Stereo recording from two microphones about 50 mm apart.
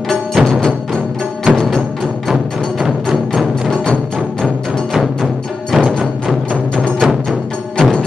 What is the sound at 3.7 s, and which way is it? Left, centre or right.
Music, centre.